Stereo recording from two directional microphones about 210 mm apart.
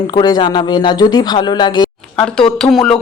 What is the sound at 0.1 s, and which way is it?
Speech, 20° left (ahead or behind).